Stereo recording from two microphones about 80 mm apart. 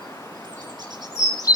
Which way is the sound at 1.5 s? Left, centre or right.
Left.